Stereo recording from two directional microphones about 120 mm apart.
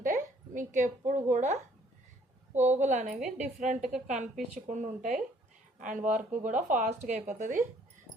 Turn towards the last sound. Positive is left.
turn(degrees=-90)